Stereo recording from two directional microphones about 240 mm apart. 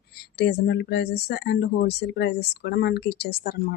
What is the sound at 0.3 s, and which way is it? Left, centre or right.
Speech, left.